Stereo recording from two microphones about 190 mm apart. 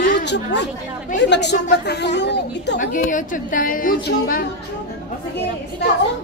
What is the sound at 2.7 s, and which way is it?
A woman's voice, 45° left (ahead or behind).